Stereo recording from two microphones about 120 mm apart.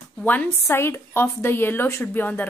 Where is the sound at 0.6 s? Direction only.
20° left (ahead or behind).